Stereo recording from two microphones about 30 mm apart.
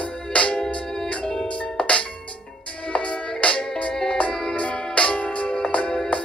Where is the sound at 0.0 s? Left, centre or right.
Left.